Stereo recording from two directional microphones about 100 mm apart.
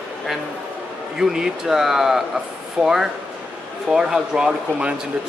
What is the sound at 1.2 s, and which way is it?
Speech, 5° right (ahead or behind).